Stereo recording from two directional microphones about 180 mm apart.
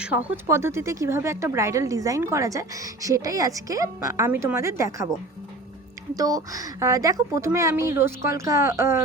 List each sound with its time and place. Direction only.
0.0 s speech: 10° right (ahead or behind)
6.1 s speech: 20° right (ahead or behind)